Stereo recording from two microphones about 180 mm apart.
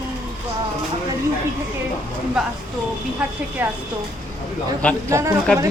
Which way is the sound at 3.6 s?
10° right (ahead or behind).